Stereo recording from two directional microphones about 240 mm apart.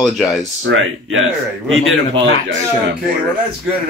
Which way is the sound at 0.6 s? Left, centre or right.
Right.